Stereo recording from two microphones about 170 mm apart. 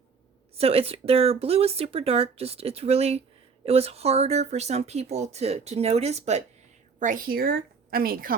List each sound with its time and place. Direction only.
0.5 s speech: 35° right (ahead or behind)
7.0 s a woman's voice: 55° right (ahead or behind)